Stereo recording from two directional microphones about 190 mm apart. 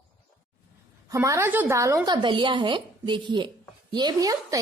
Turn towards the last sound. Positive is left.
turn(degrees=-20)  # may be behind; listen again after turning